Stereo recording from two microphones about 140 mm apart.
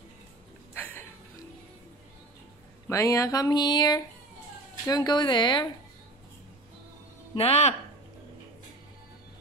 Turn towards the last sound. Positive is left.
turn(degrees=50)  # may be behind; listen again after turning